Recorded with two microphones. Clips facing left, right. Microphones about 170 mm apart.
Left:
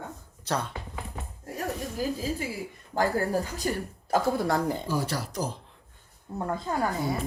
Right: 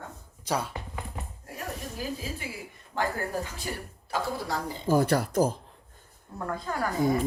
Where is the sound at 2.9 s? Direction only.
40° left (ahead or behind).